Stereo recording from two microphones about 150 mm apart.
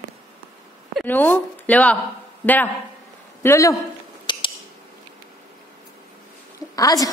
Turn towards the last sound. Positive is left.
turn(degrees=25)  # may be behind; listen again after turning